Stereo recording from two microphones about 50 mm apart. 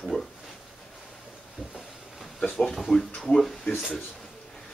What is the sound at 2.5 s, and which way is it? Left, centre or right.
Speech, centre.